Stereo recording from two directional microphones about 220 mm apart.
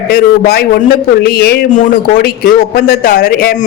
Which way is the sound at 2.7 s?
40° left (ahead or behind).